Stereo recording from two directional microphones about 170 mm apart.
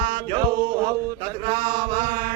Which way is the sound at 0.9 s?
25° right (ahead or behind).